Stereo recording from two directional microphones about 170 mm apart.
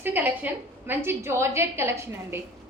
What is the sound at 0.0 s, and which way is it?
A woman's voice, 10° right (ahead or behind).